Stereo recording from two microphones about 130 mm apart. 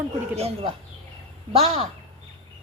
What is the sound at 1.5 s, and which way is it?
Speech, 50° right (ahead or behind).